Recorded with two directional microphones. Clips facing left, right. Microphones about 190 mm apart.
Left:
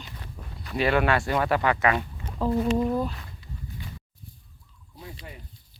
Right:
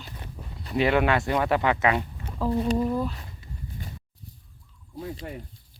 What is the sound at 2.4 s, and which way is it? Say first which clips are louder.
Speech: left 1 dB; 5° right (ahead or behind).